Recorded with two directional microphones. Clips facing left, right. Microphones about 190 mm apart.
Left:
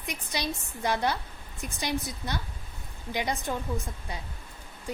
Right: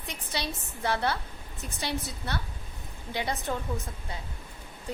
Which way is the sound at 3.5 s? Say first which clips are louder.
Even; 15° left (ahead or behind).